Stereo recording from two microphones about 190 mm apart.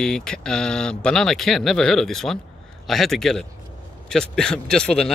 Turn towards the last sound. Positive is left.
turn(degrees=5)  # may be behind; listen again after turning